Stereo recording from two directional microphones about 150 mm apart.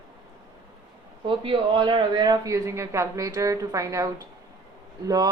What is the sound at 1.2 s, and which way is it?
Speech, 35° right (ahead or behind).